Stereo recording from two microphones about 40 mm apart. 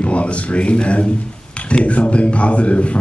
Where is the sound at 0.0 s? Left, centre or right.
Left.